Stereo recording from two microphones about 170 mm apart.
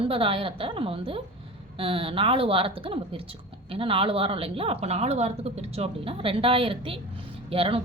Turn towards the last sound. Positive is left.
turn(degrees=-35)  # may be behind; listen again after turning